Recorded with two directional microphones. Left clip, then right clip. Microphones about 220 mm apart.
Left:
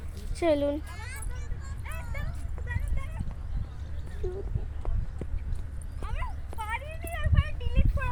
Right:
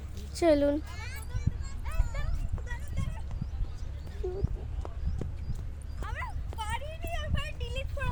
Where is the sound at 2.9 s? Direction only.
20° right (ahead or behind).